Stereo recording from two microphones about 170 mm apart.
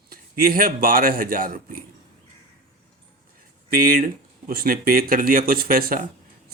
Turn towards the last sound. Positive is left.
turn(degrees=-60)  # may be behind; listen again after turning